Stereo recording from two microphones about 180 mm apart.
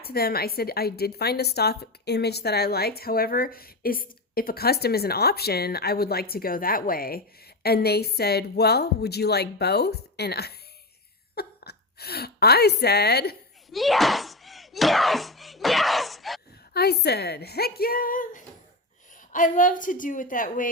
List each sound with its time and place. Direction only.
0.0 s a woman's voice: 60° left (ahead or behind)
13.7 s a sound: centre (ahead or behind)
16.7 s a woman's voice: 65° left (ahead or behind)